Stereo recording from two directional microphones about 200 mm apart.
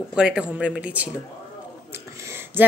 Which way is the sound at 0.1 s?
5° right (ahead or behind).